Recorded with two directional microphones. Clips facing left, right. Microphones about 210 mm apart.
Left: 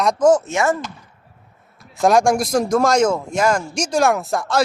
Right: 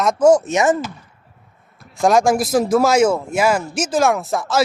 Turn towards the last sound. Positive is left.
turn(degrees=0)  # may be behind; listen again after turning